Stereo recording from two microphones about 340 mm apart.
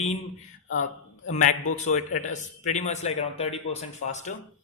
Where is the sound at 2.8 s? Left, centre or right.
Centre.